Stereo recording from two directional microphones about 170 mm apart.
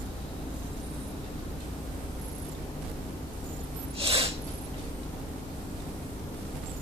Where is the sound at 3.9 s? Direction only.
35° right (ahead or behind).